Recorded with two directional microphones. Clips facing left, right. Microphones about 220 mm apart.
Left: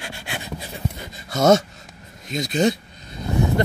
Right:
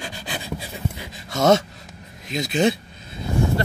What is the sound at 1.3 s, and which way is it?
Gasp, centre (ahead or behind).